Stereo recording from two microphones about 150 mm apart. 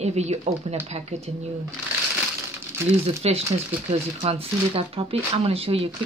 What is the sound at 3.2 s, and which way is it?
Speech, 40° right (ahead or behind).